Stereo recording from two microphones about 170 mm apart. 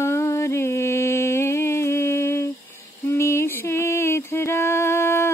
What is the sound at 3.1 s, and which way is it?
Music, 15° left (ahead or behind).